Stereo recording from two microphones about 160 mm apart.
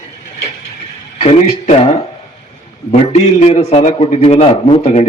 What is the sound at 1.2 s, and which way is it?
A man's voice, 45° left (ahead or behind).